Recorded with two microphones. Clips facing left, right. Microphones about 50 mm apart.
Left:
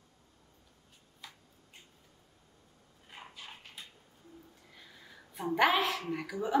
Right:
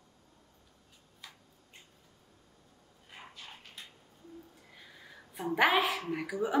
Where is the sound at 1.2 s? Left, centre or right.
Centre.